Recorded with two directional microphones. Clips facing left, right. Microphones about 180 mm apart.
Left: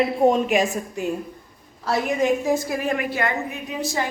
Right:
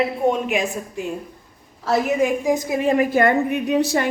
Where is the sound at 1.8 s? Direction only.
5° right (ahead or behind); by 3.1 s 30° right (ahead or behind).